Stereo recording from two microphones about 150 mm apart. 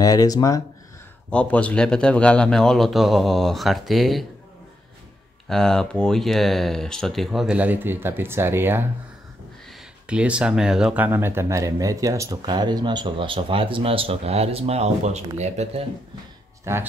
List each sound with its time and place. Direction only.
0.0 s speech: 25° left (ahead or behind)
1.3 s speech: 10° left (ahead or behind)
5.5 s speech: 5° left (ahead or behind)
11.1 s speech: 15° right (ahead or behind); by 15.8 s 50° right (ahead or behind)
16.7 s speech: 20° right (ahead or behind)